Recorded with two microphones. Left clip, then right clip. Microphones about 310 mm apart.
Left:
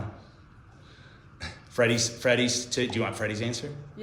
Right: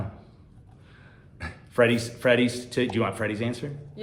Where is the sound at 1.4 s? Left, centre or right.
Right.